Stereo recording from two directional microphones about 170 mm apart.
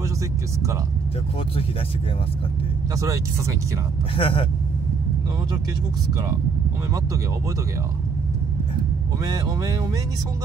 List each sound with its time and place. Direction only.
3.0 s speech: 20° right (ahead or behind)
4.2 s speech: 35° left (ahead or behind)
9.2 s speech: 20° right (ahead or behind)